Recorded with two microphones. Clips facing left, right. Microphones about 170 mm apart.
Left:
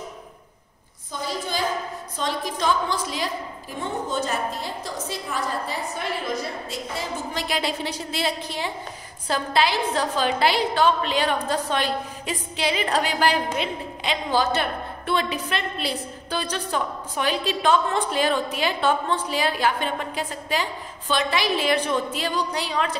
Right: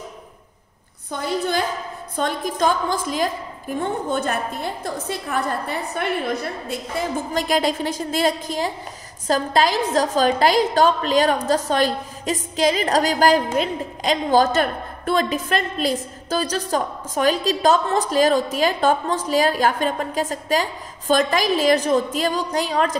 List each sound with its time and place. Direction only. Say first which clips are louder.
2.1 s a woman's voice: right 5 dB; 50° right (ahead or behind)